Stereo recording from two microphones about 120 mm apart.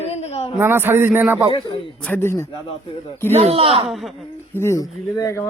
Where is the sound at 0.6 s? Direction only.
20° right (ahead or behind).